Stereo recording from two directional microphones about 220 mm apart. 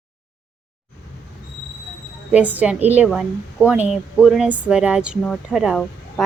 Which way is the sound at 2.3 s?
5° right (ahead or behind).